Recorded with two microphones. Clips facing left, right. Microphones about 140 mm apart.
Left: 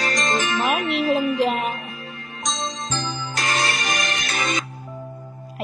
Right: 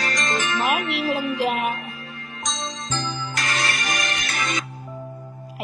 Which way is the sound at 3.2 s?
25° left (ahead or behind).